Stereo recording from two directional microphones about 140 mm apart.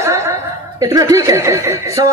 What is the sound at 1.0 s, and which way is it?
Speech, 25° right (ahead or behind).